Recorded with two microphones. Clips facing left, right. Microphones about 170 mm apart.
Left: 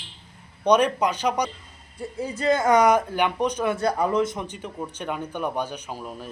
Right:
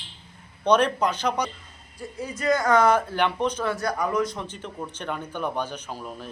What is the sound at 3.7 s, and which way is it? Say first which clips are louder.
Speech: left 3 dB; 30° left (ahead or behind).